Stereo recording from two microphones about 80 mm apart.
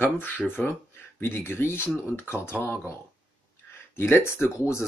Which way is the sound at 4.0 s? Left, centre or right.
Left.